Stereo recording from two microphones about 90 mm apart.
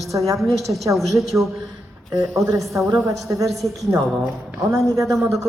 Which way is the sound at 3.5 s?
Centre (ahead or behind).